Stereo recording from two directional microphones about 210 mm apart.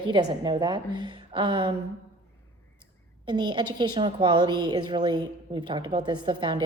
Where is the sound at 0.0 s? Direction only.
20° right (ahead or behind).